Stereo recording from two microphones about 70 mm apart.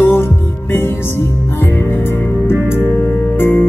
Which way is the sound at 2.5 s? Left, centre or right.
Left.